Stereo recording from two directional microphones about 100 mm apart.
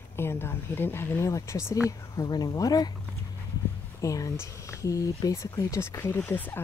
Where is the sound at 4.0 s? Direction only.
35° left (ahead or behind).